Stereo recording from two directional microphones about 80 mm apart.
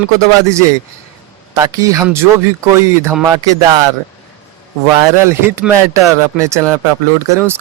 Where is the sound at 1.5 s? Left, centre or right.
Right.